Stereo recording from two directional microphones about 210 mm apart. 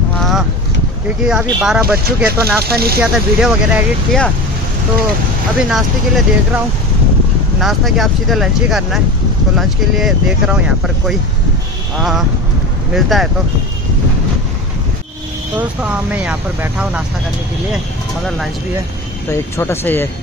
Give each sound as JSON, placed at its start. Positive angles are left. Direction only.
{"t": 0.2, "sound": "a sound", "side_deg": 0}
{"t": 1.2, "sound": "speech", "side_deg": -5}
{"t": 2.6, "sound": "speech", "side_deg": -45}
{"t": 3.0, "sound": "speech", "side_deg": -5}
{"t": 5.6, "sound": "speech", "side_deg": 0}
{"t": 7.6, "sound": "speech", "side_deg": 0}
{"t": 12.0, "sound": "speech", "side_deg": 0}
{"t": 15.5, "sound": "speech", "side_deg": -5}
{"t": 19.3, "sound": "speech", "side_deg": 10}